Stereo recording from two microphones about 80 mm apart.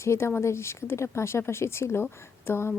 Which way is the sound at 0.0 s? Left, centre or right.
Left.